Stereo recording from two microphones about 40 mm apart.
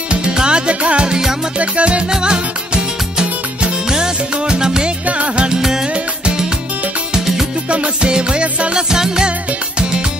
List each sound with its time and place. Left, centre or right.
0.1 s music: right
5.0 s music: right
5.5 s music: centre
7.7 s music: right
8.9 s music: centre